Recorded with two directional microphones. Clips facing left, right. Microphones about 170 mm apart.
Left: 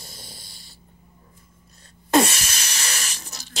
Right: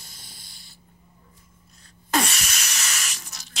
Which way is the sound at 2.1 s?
30° left (ahead or behind).